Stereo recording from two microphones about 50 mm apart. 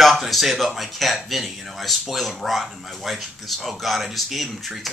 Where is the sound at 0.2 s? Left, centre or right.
Centre.